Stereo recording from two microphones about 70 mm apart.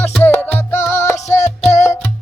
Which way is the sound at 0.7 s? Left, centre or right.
Left.